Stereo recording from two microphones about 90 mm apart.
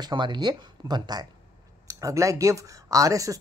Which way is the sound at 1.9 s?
40° right (ahead or behind).